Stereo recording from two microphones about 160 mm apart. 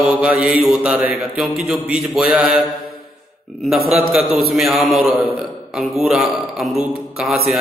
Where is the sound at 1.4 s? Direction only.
Centre (ahead or behind).